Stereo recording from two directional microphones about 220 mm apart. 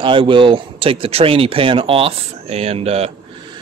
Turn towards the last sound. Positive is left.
turn(degrees=-30)  # may be behind; listen again after turning